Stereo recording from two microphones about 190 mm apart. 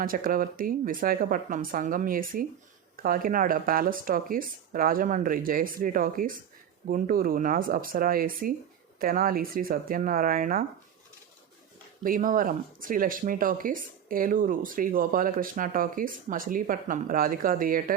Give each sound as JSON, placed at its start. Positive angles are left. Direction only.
{"t": 0.0, "sound": "speech", "side_deg": -50}
{"t": 12.0, "sound": "speech", "side_deg": -45}